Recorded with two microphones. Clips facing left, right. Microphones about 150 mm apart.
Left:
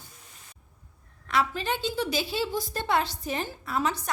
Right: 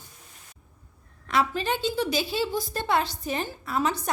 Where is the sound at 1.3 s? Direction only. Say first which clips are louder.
Right 2 dB; 30° right (ahead or behind).